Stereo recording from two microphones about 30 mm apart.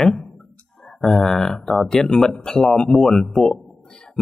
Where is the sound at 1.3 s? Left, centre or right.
Centre.